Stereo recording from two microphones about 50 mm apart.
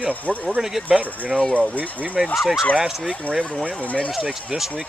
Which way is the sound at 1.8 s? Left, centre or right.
Right.